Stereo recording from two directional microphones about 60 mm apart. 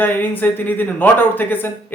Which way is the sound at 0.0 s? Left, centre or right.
Left.